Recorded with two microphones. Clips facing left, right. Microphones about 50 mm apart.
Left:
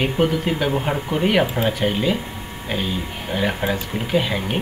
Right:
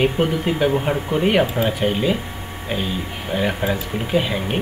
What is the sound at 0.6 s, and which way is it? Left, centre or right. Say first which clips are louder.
Speech: right 2 dB; centre.